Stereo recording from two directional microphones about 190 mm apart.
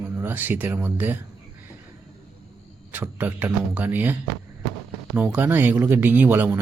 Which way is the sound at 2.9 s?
10° right (ahead or behind).